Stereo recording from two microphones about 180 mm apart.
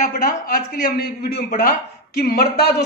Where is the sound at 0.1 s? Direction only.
50° left (ahead or behind).